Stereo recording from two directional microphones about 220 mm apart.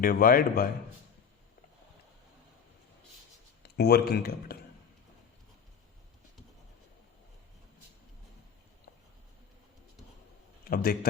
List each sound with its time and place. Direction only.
0.0 s a man's voice: 40° left (ahead or behind)
3.6 s speech: 45° left (ahead or behind)
10.7 s a man's voice: 45° left (ahead or behind)